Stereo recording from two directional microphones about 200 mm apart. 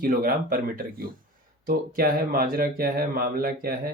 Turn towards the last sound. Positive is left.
turn(degrees=-45)  # may be behind; listen again after turning